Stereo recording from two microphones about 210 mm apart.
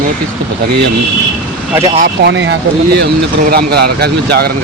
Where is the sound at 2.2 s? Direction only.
60° right (ahead or behind).